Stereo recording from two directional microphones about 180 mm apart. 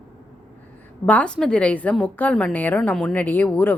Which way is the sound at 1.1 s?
5° left (ahead or behind).